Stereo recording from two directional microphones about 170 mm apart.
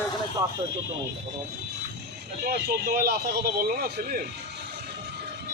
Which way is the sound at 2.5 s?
65° right (ahead or behind).